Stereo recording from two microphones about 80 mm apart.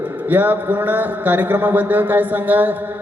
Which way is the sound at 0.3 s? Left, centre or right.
Right.